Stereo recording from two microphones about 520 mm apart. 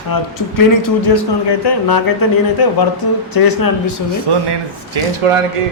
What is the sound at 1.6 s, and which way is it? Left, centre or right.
Speech, left.